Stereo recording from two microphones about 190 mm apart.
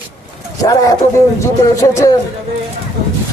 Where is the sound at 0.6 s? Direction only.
20° left (ahead or behind).